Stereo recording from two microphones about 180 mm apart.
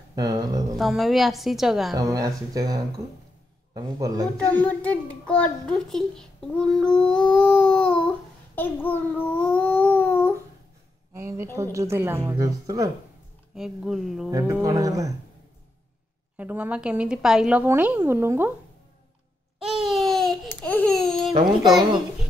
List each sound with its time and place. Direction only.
0.1 s speech: 20° right (ahead or behind)
0.7 s a woman's voice: centre (ahead or behind)
2.0 s speech: 20° right (ahead or behind)
4.5 s a child's voice: 10° left (ahead or behind)
8.5 s babbling: 10° left (ahead or behind)
11.1 s speech: 15° right (ahead or behind)
13.6 s a woman's voice: centre (ahead or behind)
14.3 s speech: 20° right (ahead or behind)
16.3 s speech: 10° right (ahead or behind)
19.6 s babbling: centre (ahead or behind)